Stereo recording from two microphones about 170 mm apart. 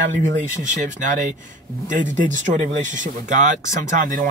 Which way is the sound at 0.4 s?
45° right (ahead or behind).